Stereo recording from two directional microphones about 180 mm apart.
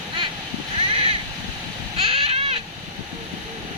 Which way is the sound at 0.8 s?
30° right (ahead or behind).